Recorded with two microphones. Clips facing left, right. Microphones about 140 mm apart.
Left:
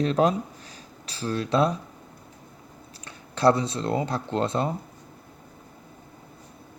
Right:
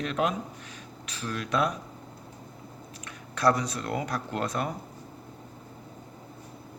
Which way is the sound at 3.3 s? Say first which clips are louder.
Left 4 dB; 30° left (ahead or behind).